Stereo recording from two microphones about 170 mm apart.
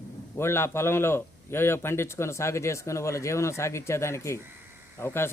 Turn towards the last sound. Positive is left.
turn(degrees=15)  # may be behind; listen again after turning